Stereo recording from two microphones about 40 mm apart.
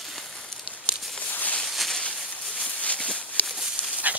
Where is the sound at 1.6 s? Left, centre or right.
Centre.